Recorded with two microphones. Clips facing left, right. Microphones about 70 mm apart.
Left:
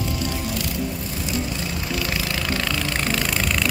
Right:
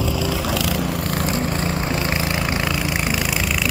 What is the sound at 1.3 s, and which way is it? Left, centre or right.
Vehicle, right.